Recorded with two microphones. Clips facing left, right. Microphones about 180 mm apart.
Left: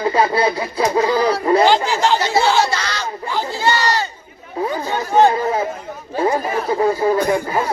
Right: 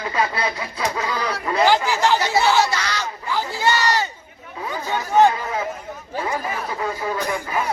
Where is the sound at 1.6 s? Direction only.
20° left (ahead or behind).